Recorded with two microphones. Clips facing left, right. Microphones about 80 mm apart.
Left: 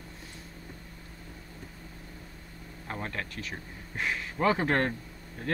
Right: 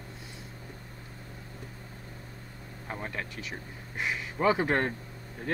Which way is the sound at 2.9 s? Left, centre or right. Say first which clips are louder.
Left 1 dB; centre.